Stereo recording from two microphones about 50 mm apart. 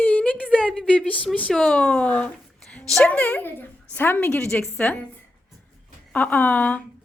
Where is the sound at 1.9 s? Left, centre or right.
Left.